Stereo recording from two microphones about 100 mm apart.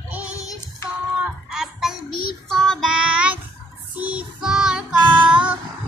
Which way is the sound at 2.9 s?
10° right (ahead or behind).